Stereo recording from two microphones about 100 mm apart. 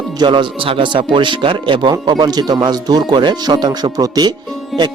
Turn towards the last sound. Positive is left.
turn(degrees=0)  # may be behind; listen again after turning